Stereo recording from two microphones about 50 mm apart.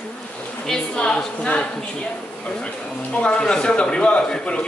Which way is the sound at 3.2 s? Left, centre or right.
Centre.